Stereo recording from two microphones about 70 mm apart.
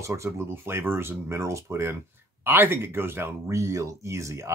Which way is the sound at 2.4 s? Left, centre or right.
Right.